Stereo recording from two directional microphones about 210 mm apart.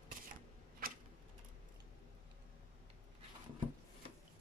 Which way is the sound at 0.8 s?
45° right (ahead or behind).